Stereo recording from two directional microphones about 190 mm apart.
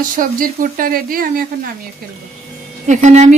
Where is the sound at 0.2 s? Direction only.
45° right (ahead or behind).